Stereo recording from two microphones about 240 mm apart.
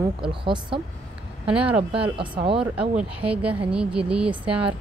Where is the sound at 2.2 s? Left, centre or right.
Right.